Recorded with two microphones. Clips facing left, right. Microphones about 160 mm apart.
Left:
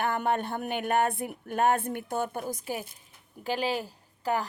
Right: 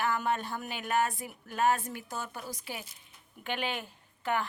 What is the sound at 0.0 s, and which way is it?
A woman's voice, 55° left (ahead or behind).